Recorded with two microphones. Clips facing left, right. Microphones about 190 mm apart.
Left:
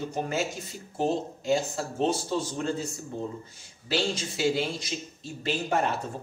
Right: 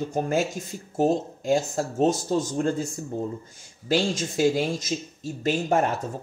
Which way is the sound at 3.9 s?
45° right (ahead or behind).